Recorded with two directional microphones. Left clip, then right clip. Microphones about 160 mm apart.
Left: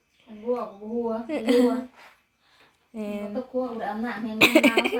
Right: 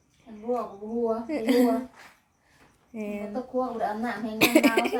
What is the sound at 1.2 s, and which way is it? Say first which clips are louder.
Speech: left 4 dB; 10° right (ahead or behind).